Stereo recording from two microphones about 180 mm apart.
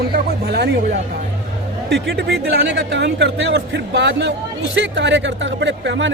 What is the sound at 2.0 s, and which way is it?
Speech, 60° right (ahead or behind).